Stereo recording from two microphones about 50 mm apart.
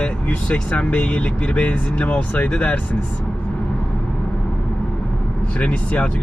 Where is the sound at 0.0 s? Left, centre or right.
Left.